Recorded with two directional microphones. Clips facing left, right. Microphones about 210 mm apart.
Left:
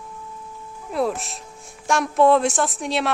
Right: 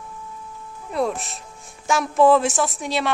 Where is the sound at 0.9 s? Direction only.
Centre (ahead or behind).